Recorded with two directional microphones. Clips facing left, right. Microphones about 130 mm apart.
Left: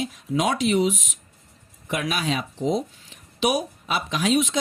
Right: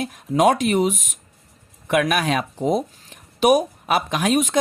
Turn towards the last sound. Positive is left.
turn(degrees=-50)  # may be behind; listen again after turning